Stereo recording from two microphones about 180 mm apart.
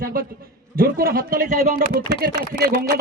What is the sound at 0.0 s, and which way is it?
A man's voice, 50° right (ahead or behind).